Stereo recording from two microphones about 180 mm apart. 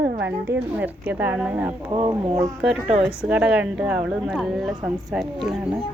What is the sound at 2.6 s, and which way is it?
Speech, 5° right (ahead or behind).